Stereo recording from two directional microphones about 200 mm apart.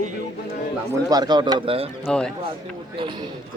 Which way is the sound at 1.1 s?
20° right (ahead or behind).